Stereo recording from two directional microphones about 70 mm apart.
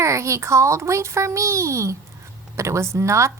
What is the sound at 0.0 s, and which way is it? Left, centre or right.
A woman's voice, right.